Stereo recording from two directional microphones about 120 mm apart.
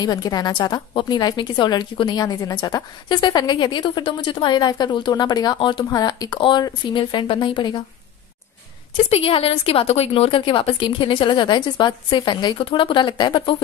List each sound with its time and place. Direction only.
0.0 s a woman's voice: 35° left (ahead or behind)
9.1 s a woman's voice: 55° left (ahead or behind)